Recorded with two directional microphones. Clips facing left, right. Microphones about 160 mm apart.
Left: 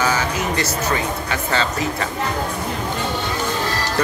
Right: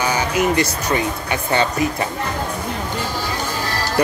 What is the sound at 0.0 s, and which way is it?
Music, 15° right (ahead or behind).